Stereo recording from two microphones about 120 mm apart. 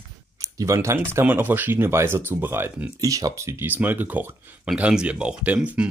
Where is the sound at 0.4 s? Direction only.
25° right (ahead or behind).